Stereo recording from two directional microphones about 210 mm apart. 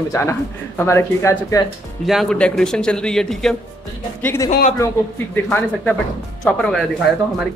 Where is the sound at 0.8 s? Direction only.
10° left (ahead or behind).